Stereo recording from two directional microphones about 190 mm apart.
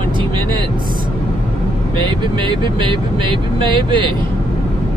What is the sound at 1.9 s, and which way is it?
Speech, 25° right (ahead or behind).